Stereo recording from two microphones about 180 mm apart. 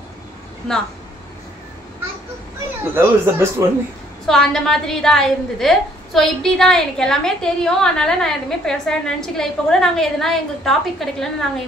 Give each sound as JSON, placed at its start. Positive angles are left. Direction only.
{"t": 2.8, "sound": "speech", "side_deg": -10}
{"t": 4.3, "sound": "a woman's voice", "side_deg": 0}